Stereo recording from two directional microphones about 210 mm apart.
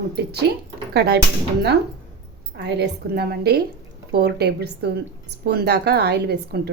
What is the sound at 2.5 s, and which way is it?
A woman's voice, 50° right (ahead or behind).